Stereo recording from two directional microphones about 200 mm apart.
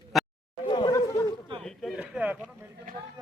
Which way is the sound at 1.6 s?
Centre (ahead or behind).